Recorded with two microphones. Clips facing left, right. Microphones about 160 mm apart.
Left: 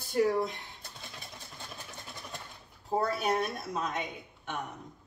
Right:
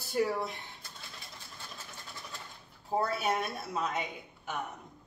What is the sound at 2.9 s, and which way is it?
Speech, 5° right (ahead or behind).